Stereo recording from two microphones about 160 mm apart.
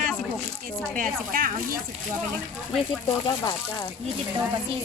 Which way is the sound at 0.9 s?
60° right (ahead or behind).